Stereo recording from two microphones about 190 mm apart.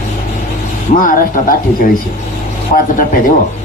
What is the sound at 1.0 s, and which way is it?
Speech, 45° left (ahead or behind).